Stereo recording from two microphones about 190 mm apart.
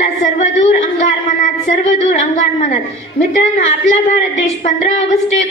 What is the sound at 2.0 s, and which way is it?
Speech, 40° left (ahead or behind).